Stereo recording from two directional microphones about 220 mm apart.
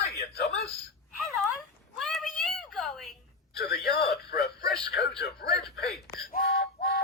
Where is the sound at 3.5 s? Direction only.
45° left (ahead or behind).